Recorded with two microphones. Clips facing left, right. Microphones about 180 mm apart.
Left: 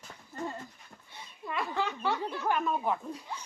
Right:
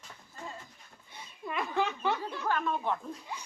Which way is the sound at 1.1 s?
20° right (ahead or behind).